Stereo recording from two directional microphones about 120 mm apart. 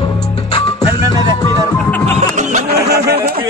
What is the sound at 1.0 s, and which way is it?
Music, 35° right (ahead or behind).